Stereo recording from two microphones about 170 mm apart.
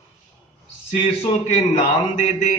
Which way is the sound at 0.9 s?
45° left (ahead or behind).